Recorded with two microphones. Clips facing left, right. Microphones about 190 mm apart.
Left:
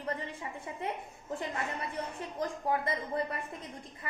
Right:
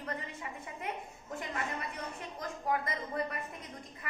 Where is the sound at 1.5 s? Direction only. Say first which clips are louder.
Left 2 dB; 30° left (ahead or behind).